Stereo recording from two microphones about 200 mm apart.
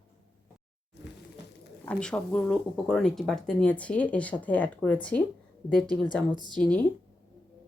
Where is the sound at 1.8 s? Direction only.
5° left (ahead or behind).